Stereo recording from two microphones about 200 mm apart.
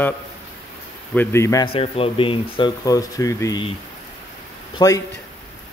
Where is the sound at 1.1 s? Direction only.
10° left (ahead or behind).